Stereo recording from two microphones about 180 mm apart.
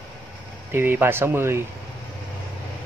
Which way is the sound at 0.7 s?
10° right (ahead or behind).